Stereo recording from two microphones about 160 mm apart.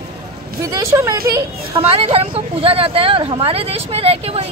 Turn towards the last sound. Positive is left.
turn(degrees=-40)  # may be behind; listen again after turning